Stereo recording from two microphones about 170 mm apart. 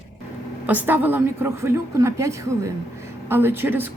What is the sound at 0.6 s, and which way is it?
A woman's voice, 10° right (ahead or behind).